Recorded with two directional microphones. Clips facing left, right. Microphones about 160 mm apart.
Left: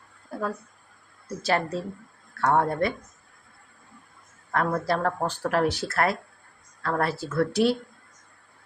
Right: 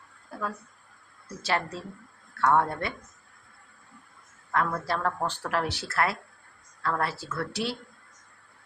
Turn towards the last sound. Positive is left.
turn(degrees=45)  # may be behind; listen again after turning